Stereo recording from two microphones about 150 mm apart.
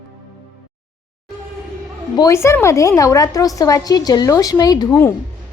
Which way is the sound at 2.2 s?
20° left (ahead or behind).